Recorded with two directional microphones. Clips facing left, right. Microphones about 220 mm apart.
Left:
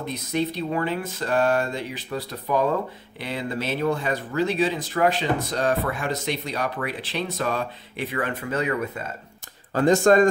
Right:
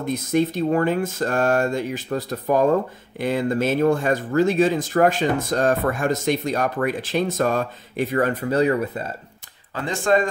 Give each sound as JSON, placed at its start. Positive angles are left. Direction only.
{"t": 0.0, "sound": "speech", "side_deg": -45}
{"t": 9.8, "sound": "speech", "side_deg": 45}